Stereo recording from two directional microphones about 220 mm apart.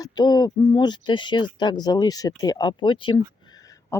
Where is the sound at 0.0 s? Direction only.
20° left (ahead or behind).